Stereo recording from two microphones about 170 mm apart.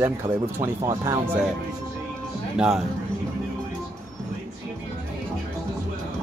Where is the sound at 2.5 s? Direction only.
Centre (ahead or behind).